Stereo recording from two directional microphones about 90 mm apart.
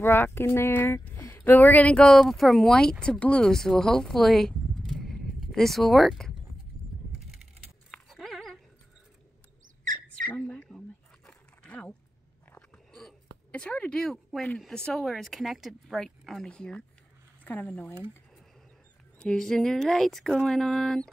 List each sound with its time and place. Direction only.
0.0 s speech: 25° left (ahead or behind)
2.1 s speech: centre (ahead or behind)
7.9 s dog: 5° left (ahead or behind)
10.3 s a sound: 15° left (ahead or behind)
11.2 s dog: 10° left (ahead or behind)
12.9 s a sound: 5° left (ahead or behind)
13.6 s speech: 10° left (ahead or behind)
17.5 s speech: 20° left (ahead or behind)
19.1 s speech: 5° left (ahead or behind)